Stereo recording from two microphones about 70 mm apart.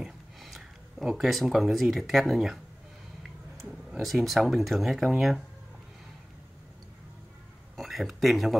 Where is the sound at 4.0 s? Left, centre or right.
Centre.